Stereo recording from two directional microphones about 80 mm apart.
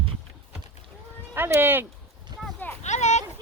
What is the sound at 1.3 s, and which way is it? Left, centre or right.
Speech, right.